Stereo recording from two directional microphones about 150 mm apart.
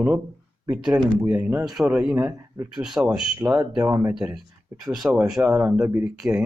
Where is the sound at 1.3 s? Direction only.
10° right (ahead or behind).